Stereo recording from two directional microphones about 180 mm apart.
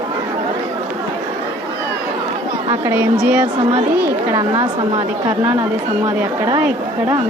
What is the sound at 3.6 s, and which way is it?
Speech, 35° right (ahead or behind).